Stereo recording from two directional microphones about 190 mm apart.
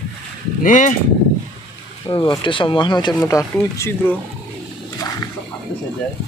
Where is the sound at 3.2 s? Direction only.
10° left (ahead or behind).